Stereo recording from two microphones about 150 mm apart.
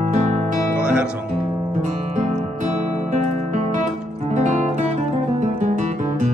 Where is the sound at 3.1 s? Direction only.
55° right (ahead or behind).